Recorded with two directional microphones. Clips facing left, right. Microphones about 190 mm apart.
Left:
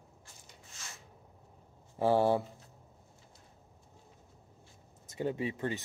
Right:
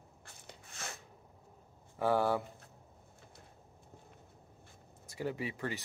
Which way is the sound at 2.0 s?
25° left (ahead or behind).